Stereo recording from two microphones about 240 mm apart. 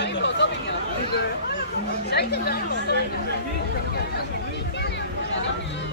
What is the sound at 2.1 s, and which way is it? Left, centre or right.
Speech, left.